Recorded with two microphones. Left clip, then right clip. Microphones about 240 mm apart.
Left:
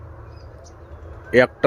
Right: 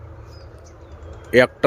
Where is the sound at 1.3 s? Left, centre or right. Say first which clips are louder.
Right 1 dB; centre.